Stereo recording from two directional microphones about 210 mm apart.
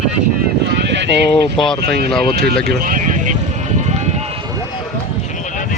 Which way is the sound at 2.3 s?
50° right (ahead or behind).